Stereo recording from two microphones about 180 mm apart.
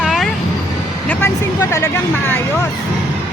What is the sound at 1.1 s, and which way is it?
Speech, 10° left (ahead or behind).